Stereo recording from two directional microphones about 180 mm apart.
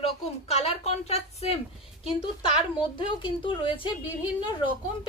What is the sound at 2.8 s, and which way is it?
Speech, 25° left (ahead or behind).